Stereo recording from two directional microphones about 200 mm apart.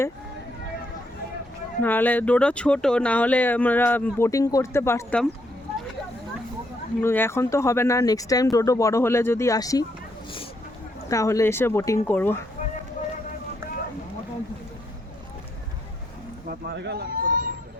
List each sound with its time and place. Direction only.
1.8 s speech: 10° left (ahead or behind)
7.0 s speech: 10° left (ahead or behind)
11.1 s speech: 15° left (ahead or behind)
16.5 s speech: 55° right (ahead or behind)